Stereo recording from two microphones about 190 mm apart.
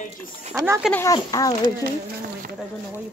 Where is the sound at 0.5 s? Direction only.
15° right (ahead or behind).